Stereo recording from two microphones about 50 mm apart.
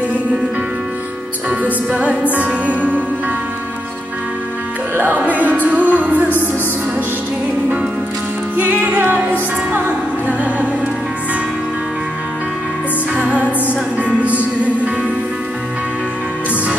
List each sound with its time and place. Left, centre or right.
1.5 s music: right
4.9 s music: right
8.5 s music: right
13.1 s music: right